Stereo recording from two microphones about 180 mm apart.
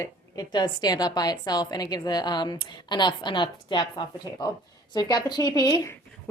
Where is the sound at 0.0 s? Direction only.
20° left (ahead or behind).